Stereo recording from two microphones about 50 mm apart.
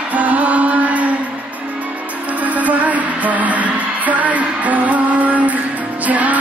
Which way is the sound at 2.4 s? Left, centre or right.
Right.